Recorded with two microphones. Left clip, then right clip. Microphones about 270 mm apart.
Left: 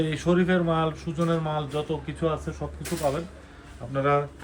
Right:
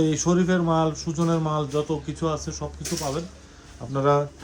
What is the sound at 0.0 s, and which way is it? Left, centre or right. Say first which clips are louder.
Speech: right 2 dB; centre.